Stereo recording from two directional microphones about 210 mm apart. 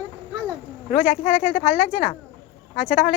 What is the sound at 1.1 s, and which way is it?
Speech, 35° left (ahead or behind).